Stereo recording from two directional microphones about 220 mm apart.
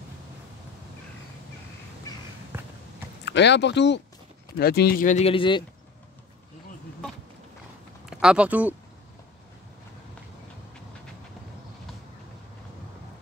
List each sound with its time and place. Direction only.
2.5 s run: 10° right (ahead or behind)
3.3 s speech: 50° left (ahead or behind); by 5.6 s 25° left (ahead or behind)
8.1 s speech: 5° right (ahead or behind)